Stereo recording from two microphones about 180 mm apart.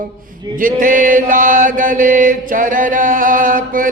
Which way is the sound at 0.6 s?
45° right (ahead or behind).